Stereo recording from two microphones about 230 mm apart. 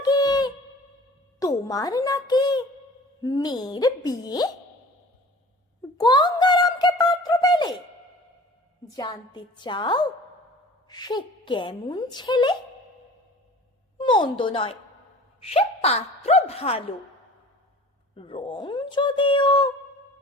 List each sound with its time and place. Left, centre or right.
0.0 s a sound: centre
1.4 s a woman's voice: centre
6.0 s a sound: centre
8.9 s a woman's voice: centre
14.0 s a woman's voice: left
18.2 s a woman's voice: left